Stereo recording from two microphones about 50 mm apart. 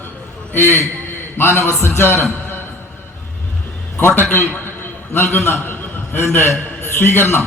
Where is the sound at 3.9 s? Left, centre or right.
Left.